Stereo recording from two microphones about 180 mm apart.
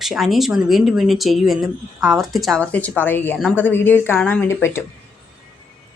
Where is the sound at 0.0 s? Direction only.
Centre (ahead or behind).